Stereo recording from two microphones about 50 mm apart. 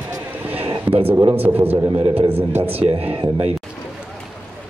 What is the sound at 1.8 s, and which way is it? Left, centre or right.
Speech, right.